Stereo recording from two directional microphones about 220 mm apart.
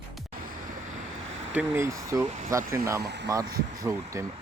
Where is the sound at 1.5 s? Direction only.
10° right (ahead or behind).